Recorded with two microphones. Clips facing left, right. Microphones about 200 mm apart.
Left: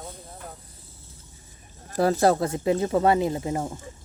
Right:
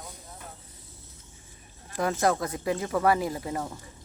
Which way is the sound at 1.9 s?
35° left (ahead or behind).